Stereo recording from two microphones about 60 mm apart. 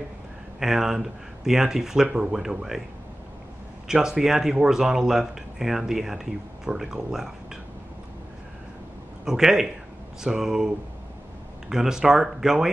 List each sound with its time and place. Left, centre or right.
0.6 s speech: centre
3.8 s speech: centre
9.2 s speech: centre
11.7 s speech: centre